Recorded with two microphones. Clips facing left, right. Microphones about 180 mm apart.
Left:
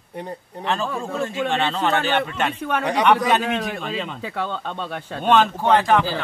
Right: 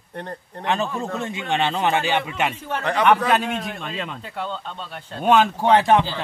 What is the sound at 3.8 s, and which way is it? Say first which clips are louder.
Speech: left 3 dB; centre (ahead or behind).